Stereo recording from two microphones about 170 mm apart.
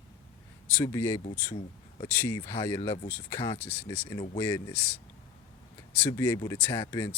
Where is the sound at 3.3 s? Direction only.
15° left (ahead or behind).